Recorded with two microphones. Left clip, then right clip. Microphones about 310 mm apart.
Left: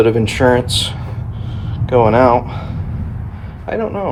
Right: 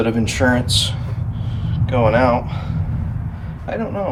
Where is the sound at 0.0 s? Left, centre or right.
Left.